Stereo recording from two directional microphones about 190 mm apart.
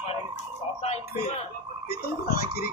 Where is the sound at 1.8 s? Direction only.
55° left (ahead or behind).